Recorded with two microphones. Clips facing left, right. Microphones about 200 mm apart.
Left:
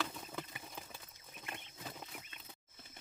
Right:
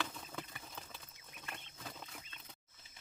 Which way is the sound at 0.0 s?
5° left (ahead or behind).